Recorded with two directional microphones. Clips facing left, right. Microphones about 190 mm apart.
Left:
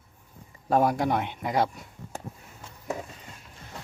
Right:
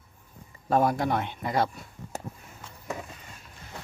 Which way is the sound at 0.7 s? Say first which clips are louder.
Left 1 dB; 10° left (ahead or behind).